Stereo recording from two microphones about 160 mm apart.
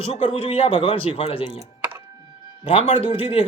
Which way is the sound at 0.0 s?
40° left (ahead or behind).